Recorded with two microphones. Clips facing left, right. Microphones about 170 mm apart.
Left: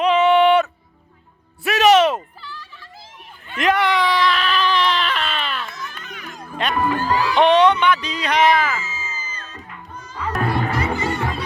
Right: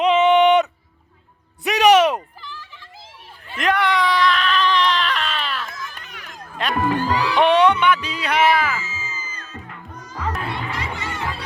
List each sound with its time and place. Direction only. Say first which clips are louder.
0.0 s music: even; 20° right (ahead or behind)
3.6 s baby cry: left 1 dB; centre (ahead or behind)
6.6 s music: left 1 dB; centre (ahead or behind)
6.9 s speech: even; 45° left (ahead or behind)
7.3 s music: left 1 dB; 10° right (ahead or behind)
8.8 s music: left 1 dB; 35° left (ahead or behind)
10.3 s music: left 6 dB; 50° left (ahead or behind)